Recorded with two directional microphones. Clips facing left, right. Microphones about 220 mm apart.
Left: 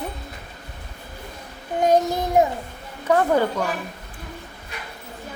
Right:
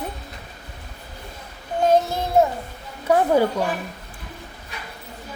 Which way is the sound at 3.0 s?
10° right (ahead or behind).